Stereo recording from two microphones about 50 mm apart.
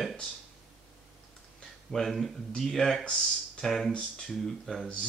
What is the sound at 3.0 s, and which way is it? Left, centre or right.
Speech, centre.